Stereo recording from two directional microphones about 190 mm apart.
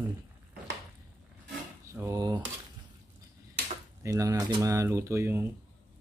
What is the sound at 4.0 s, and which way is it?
Speech, 15° right (ahead or behind).